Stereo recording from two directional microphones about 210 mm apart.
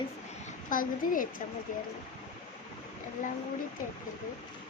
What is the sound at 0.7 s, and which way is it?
Speech, 40° left (ahead or behind).